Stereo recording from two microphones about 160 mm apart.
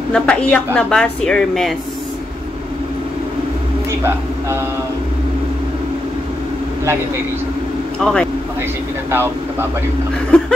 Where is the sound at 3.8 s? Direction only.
15° right (ahead or behind).